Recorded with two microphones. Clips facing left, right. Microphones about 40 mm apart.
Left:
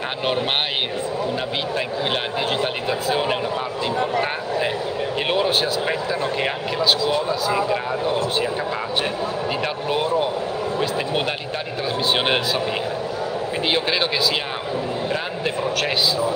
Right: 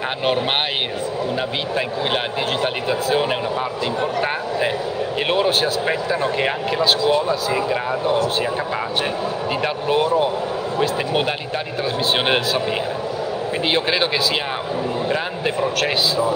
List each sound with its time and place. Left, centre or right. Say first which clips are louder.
2.6 s speech: right 2 dB; centre
9.8 s speech: right 4 dB; centre
13.7 s speech: right 2 dB; centre